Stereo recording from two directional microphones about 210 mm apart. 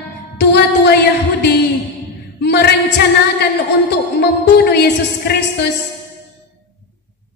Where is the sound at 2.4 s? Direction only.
55° left (ahead or behind).